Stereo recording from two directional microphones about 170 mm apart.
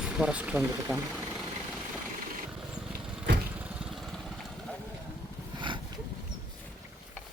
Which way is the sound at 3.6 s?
Centre (ahead or behind).